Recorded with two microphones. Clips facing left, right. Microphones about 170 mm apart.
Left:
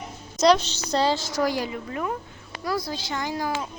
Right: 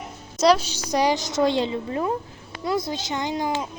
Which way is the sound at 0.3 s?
5° right (ahead or behind).